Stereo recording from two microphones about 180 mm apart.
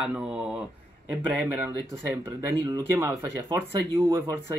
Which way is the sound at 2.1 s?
20° right (ahead or behind).